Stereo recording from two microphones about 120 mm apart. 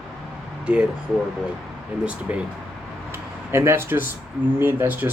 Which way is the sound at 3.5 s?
20° right (ahead or behind).